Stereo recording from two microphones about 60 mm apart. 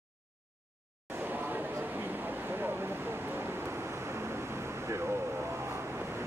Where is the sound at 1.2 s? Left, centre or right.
Right.